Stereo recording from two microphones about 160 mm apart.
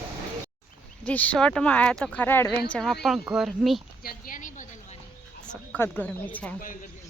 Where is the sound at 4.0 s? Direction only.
65° left (ahead or behind).